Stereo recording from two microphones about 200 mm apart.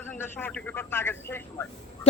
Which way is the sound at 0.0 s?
10° left (ahead or behind).